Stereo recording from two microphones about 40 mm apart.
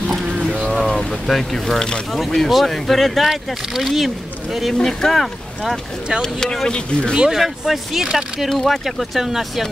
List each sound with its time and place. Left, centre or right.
0.8 s speech: centre
7.3 s speech: centre